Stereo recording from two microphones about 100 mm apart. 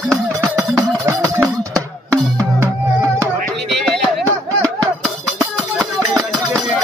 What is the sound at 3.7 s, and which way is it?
Music, 5° left (ahead or behind).